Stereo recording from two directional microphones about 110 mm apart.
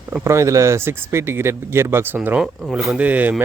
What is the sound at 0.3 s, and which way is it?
Speech, 25° right (ahead or behind).